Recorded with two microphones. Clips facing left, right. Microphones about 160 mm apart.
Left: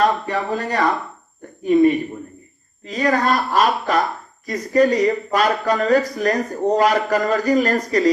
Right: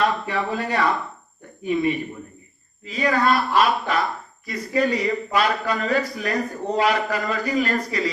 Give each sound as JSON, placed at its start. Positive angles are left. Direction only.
{"t": 0.0, "sound": "speech", "side_deg": 40}